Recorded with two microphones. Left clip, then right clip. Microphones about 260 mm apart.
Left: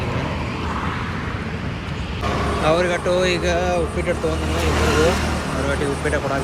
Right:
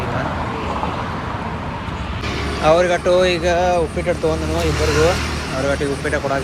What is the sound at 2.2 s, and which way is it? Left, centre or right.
Vehicle, left.